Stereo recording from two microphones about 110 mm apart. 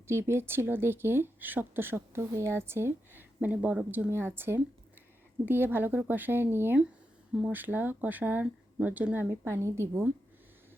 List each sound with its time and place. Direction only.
0.1 s speech: 25° right (ahead or behind)